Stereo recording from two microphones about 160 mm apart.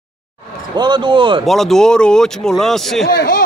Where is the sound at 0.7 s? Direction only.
30° right (ahead or behind).